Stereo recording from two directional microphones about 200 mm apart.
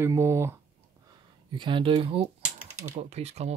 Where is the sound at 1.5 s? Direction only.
25° right (ahead or behind).